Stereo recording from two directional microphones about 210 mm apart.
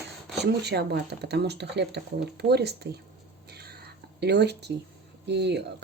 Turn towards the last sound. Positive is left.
turn(degrees=-55)  # may be behind; listen again after turning